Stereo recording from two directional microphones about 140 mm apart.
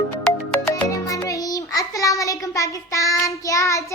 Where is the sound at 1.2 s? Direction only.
25° left (ahead or behind).